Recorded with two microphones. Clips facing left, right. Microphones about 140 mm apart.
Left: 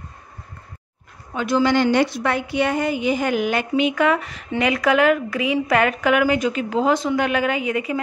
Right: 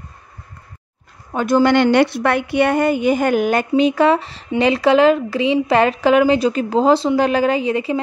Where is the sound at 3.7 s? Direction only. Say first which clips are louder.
Right 5 dB; 35° right (ahead or behind).